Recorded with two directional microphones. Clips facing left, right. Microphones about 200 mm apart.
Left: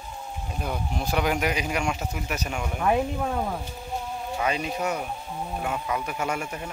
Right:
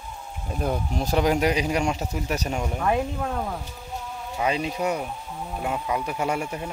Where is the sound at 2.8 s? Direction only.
5° left (ahead or behind).